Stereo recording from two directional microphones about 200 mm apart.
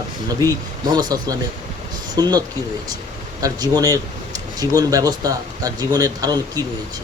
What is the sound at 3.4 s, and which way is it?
Speech, 20° right (ahead or behind).